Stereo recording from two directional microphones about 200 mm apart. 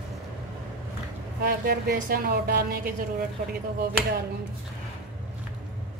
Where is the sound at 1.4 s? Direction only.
50° right (ahead or behind).